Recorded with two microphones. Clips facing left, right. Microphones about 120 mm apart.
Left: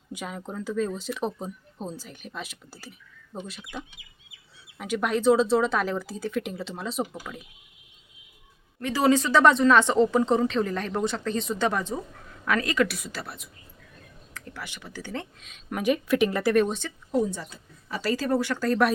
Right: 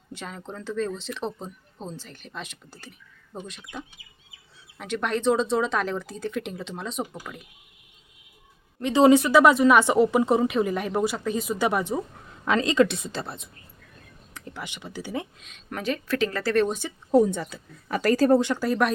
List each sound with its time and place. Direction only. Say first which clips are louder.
0.1 s speech: left 2 dB; 10° left (ahead or behind)
8.8 s a woman's voice: right 5 dB; 20° right (ahead or behind)
15.4 s speech: left 2 dB; centre (ahead or behind)
15.8 s speech: left 3 dB; 15° left (ahead or behind)
16.6 s speech: right 2 dB; 5° right (ahead or behind)
17.1 s speech: right 6 dB; 45° right (ahead or behind)
17.3 s speech: right 6 dB; 60° right (ahead or behind)
18.3 s a woman's voice: right 5 dB; 20° right (ahead or behind)